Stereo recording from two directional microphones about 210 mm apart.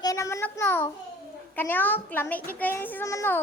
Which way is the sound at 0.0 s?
15° left (ahead or behind).